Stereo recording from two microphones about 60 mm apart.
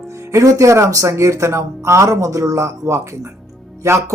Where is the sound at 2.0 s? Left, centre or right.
Right.